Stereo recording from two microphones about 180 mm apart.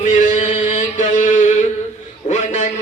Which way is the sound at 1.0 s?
40° left (ahead or behind).